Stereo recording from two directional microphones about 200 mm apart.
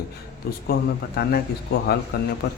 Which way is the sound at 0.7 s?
50° left (ahead or behind).